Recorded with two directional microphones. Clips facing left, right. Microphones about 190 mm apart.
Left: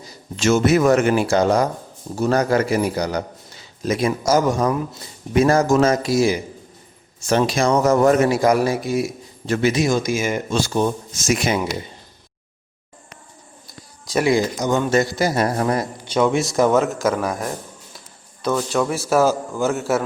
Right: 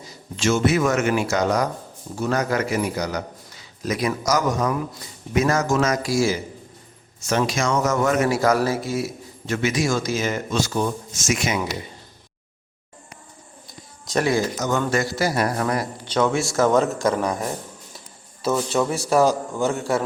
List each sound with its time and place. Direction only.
0.3 s a man's voice: 45° left (ahead or behind); by 6.4 s 20° left (ahead or behind)
7.2 s a man's voice: 30° left (ahead or behind)
8.3 s a man's voice: 15° left (ahead or behind)
9.5 s a man's voice: 35° left (ahead or behind)
9.8 s a man's voice: 15° left (ahead or behind)
10.5 s speech: 30° left (ahead or behind)
13.7 s speech: 5° left (ahead or behind); by 15.9 s 25° left (ahead or behind)
16.0 s speech: 10° left (ahead or behind)